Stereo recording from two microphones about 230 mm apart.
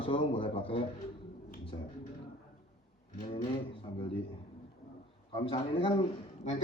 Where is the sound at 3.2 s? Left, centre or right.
Left.